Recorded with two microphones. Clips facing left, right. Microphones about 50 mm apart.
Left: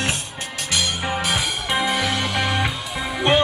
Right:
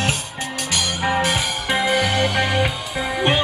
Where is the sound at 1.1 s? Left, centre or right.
Right.